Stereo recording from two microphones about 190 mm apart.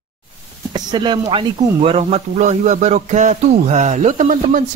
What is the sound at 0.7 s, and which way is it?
Speech, 25° right (ahead or behind).